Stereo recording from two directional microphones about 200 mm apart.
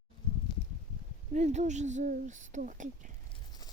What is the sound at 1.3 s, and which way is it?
Speech, 35° right (ahead or behind).